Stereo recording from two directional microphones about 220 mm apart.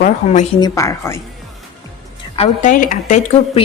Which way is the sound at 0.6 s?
15° left (ahead or behind).